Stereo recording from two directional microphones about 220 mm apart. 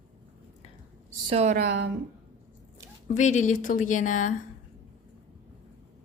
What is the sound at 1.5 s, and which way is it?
Speech, 45° right (ahead or behind).